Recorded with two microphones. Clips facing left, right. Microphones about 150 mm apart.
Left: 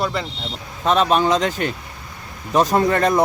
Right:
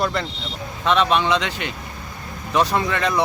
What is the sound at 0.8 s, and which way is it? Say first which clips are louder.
Speech: left 2 dB; 40° left (ahead or behind).